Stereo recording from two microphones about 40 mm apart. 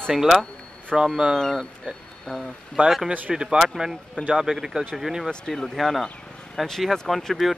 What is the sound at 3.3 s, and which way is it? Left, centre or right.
Speech, centre.